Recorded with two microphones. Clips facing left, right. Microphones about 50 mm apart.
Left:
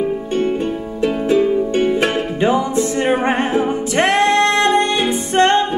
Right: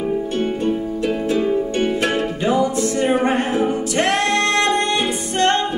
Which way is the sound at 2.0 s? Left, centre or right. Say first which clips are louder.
Left 2 dB; left.